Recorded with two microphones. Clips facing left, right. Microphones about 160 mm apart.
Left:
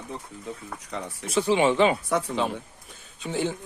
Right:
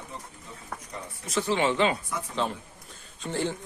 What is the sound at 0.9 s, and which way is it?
Speech, 90° left.